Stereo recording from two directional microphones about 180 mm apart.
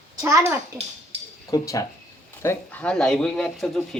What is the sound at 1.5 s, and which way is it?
Speech, 20° left (ahead or behind).